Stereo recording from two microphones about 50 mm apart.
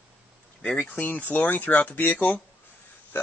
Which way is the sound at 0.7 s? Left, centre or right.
Left.